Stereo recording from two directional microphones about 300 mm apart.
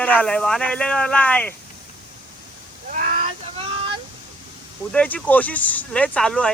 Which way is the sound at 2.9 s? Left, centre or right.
Right.